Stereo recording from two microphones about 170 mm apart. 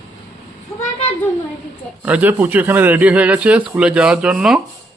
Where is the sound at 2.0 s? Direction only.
10° right (ahead or behind).